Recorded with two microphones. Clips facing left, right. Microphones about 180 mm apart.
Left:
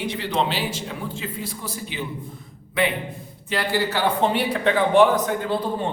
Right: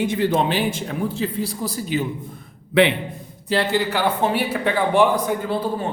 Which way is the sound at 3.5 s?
25° right (ahead or behind).